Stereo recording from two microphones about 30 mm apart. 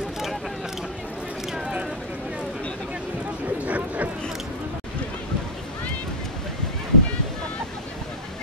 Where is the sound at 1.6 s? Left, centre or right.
Right.